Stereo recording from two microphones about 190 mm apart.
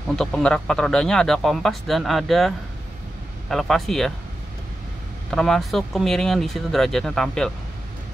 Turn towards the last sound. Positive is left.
turn(degrees=5)  # may be behind; listen again after turning